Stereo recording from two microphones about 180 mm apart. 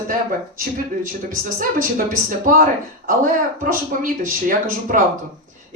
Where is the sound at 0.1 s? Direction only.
50° right (ahead or behind).